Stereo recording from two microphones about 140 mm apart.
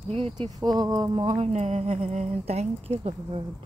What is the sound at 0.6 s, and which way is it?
Speech, 25° right (ahead or behind).